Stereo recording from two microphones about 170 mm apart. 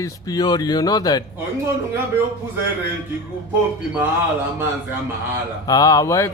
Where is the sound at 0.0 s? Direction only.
20° left (ahead or behind).